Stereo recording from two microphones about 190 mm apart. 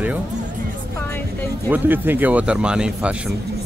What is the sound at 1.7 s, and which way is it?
Speech, 10° right (ahead or behind).